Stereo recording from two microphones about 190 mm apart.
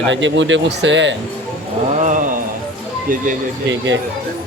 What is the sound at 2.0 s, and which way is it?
Mantra, 40° right (ahead or behind).